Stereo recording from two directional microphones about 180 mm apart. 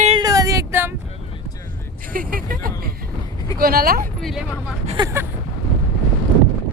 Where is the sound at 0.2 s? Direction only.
20° right (ahead or behind).